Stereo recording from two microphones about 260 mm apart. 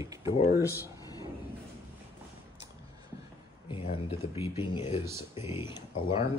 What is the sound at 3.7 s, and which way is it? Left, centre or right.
Speech, centre.